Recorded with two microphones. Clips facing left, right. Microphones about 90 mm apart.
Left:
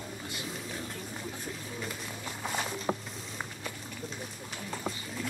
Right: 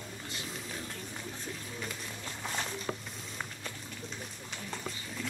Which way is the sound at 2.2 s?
10° left (ahead or behind).